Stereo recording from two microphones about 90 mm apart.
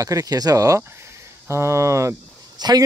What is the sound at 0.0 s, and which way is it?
Speech, 40° right (ahead or behind).